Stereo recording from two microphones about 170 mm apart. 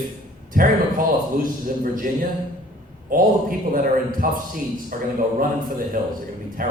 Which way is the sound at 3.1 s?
55° right (ahead or behind).